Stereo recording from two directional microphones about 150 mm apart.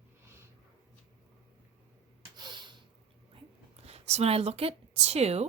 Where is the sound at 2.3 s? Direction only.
30° right (ahead or behind).